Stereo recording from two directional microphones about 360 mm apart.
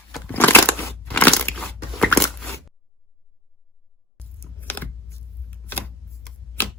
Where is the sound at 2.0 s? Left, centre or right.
Centre.